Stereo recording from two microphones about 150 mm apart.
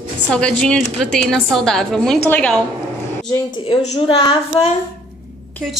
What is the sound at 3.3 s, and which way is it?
A woman's voice, 35° left (ahead or behind).